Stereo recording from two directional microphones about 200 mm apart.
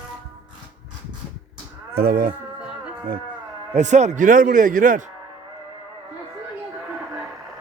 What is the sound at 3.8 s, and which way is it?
A man's voice, 35° right (ahead or behind).